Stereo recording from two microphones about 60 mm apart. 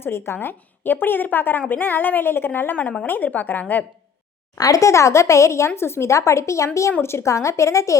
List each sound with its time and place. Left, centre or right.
0.0 s a woman's voice: left
4.5 s speech: left